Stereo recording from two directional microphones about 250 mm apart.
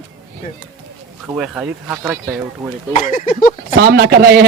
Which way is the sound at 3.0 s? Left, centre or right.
Left.